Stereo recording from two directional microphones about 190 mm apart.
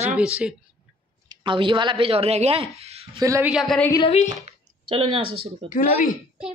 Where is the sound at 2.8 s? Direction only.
30° right (ahead or behind).